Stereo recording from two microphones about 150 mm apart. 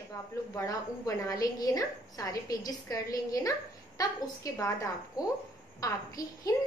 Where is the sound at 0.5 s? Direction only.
20° left (ahead or behind).